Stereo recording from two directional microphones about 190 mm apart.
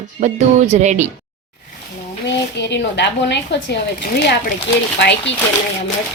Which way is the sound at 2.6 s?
65° left (ahead or behind).